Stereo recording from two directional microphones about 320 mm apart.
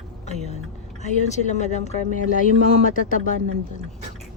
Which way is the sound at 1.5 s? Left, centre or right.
Left.